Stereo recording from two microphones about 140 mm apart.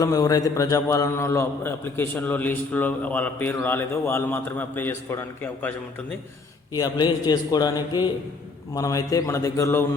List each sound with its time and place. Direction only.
0.0 s a man's voice: 25° left (ahead or behind)
6.7 s a man's voice: 30° left (ahead or behind)